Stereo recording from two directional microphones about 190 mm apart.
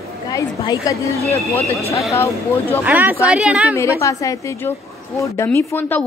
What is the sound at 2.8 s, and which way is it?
Speech, 10° right (ahead or behind).